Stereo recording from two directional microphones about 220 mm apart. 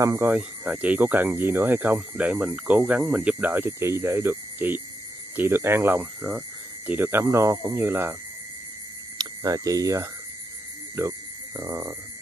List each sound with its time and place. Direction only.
0.0 s speech: 10° right (ahead or behind)
9.2 s speech: 15° right (ahead or behind)